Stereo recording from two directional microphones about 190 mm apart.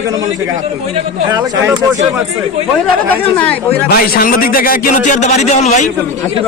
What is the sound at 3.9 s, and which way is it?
A man's voice, 50° left (ahead or behind).